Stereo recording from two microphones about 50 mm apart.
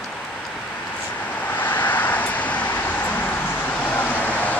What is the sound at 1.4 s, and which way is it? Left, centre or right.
Vehicle, left.